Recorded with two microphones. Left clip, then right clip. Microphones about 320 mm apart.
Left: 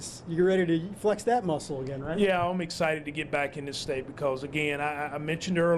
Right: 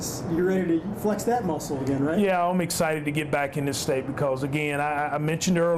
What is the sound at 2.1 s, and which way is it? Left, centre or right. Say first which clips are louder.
A man's voice: right 1 dB; centre.